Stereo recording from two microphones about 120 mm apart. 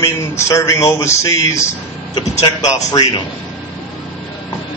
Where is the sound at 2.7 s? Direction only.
35° left (ahead or behind).